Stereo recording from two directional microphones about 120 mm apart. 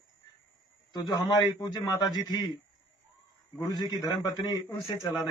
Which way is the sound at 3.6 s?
35° left (ahead or behind).